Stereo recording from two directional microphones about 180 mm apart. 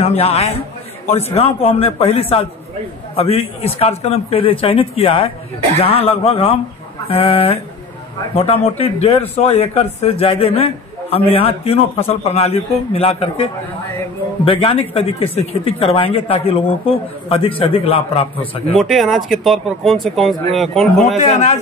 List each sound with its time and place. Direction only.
0.0 s speech: 35° left (ahead or behind)
18.8 s speech: centre (ahead or behind)
21.2 s speech: 40° left (ahead or behind)